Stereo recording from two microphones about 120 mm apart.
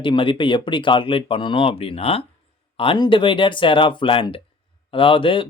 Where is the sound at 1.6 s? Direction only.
55° left (ahead or behind).